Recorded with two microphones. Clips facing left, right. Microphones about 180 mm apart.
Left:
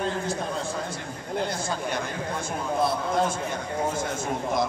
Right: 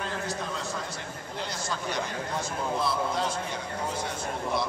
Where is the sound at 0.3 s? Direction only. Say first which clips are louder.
Left 4 dB; 50° left (ahead or behind).